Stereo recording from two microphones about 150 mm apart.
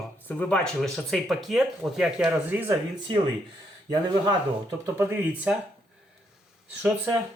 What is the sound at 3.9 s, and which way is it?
Speech, 30° right (ahead or behind).